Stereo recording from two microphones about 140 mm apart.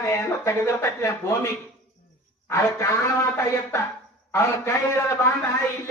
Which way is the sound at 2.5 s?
20° left (ahead or behind).